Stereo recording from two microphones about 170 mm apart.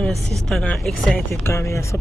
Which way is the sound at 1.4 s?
15° left (ahead or behind).